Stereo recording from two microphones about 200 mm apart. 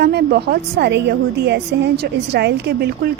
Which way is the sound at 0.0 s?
55° right (ahead or behind).